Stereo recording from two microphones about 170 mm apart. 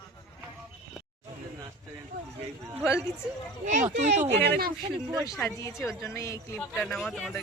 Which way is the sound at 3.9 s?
45° right (ahead or behind).